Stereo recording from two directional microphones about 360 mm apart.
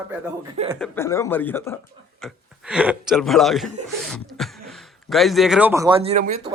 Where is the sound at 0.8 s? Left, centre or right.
Centre.